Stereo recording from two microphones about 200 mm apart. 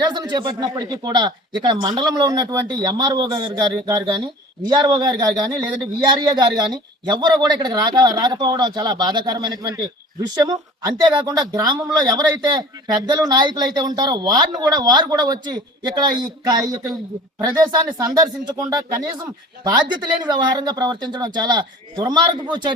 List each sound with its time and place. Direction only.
0.1 s speech: 20° right (ahead or behind)